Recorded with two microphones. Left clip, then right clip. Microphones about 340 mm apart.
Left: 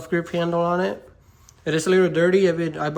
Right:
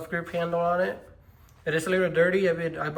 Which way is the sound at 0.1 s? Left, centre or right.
Centre.